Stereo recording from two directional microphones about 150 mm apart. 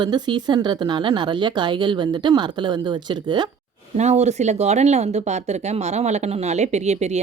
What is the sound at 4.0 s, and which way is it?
Speech, 50° right (ahead or behind).